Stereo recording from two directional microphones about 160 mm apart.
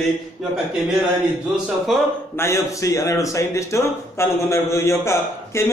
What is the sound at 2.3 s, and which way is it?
A man's voice, 20° left (ahead or behind).